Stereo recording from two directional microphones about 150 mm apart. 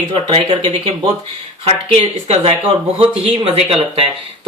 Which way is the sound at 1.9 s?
40° right (ahead or behind).